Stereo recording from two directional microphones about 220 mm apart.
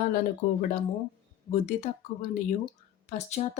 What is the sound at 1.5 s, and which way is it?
Speech, 30° left (ahead or behind).